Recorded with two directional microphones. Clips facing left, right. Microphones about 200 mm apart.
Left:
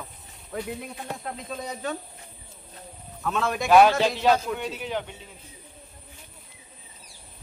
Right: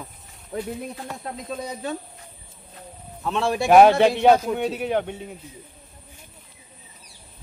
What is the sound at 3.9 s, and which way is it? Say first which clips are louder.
Speech: right 6 dB; 60° right (ahead or behind).